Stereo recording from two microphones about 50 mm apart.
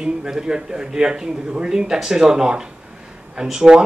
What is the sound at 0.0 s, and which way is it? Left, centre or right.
Speech, centre.